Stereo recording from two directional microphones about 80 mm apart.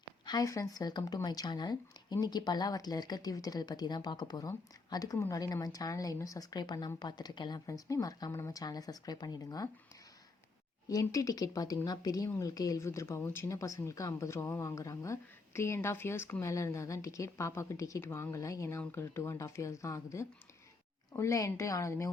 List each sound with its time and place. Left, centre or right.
0.4 s speech: left
7.7 s speech: left
10.8 s speech: left
18.8 s speech: left